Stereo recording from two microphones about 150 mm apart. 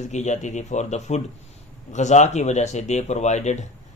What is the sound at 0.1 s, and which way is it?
Speech, 50° left (ahead or behind).